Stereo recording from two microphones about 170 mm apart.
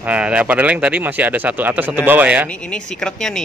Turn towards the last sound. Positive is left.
turn(degrees=5)  # may be behind; listen again after turning